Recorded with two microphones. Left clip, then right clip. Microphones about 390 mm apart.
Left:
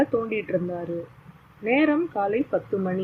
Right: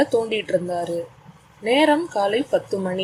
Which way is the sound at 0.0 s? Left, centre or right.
Centre.